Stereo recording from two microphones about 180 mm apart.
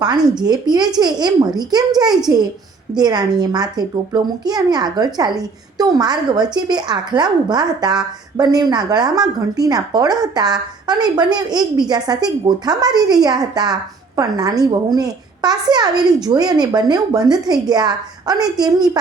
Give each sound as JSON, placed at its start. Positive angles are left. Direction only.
{"t": 0.0, "sound": "a woman's voice", "side_deg": -25}